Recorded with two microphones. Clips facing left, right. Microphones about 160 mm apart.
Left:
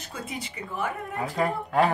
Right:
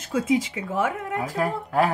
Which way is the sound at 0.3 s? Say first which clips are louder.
Right 13 dB; 90° right.